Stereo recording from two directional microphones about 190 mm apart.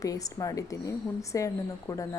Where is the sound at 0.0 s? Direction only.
20° left (ahead or behind).